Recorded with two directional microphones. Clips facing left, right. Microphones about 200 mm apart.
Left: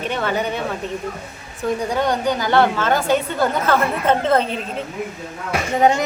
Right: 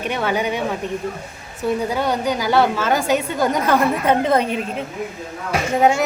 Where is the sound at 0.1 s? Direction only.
10° right (ahead or behind).